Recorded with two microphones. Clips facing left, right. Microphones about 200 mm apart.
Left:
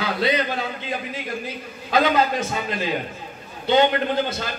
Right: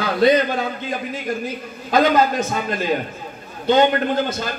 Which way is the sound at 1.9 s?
45° right (ahead or behind).